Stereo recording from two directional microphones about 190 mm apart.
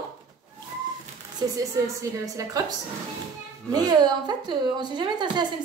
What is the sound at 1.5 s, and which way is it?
A woman's voice, 15° right (ahead or behind).